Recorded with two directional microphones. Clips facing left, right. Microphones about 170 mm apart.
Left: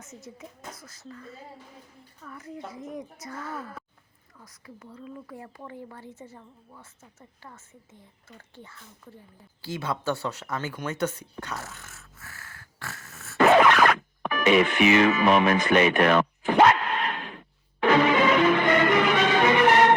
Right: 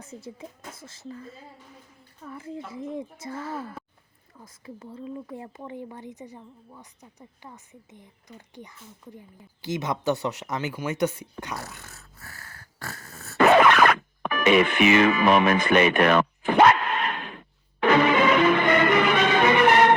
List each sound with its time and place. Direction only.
0.0 s speech: 30° right (ahead or behind); by 11.6 s 15° right (ahead or behind)
11.8 s dog: 35° right (ahead or behind)
13.4 s music: 65° right (ahead or behind)